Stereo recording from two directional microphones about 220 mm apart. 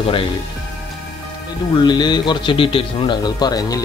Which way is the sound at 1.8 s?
20° left (ahead or behind).